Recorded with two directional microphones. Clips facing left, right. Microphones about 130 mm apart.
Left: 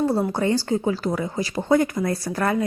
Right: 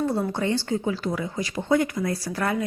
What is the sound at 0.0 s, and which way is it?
A woman's voice, 35° left (ahead or behind).